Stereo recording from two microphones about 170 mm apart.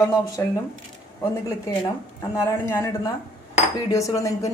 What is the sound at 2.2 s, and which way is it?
Speech, 15° left (ahead or behind).